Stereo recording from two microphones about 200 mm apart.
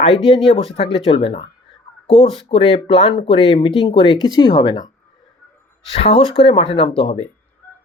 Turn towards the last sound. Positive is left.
turn(degrees=30)  # may be behind; listen again after turning